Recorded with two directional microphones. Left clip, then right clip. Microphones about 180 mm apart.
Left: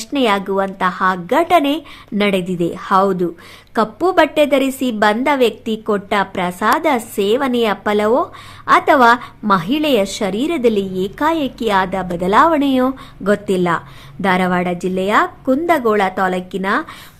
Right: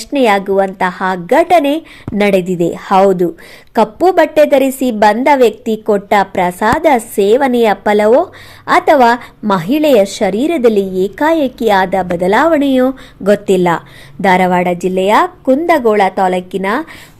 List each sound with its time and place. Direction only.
0.0 s a woman's voice: 15° right (ahead or behind)